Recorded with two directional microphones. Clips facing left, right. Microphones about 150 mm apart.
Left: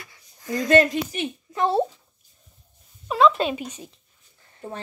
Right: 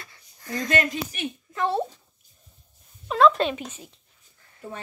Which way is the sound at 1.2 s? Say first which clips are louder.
Left 1 dB; 25° left (ahead or behind).